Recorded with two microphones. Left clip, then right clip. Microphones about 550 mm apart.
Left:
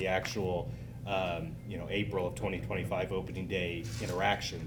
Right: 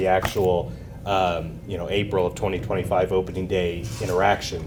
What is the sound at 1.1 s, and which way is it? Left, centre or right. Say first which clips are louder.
Speech: right 12 dB; right.